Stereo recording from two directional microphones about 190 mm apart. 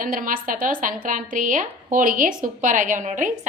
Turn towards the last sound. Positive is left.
turn(degrees=-40)  # may be behind; listen again after turning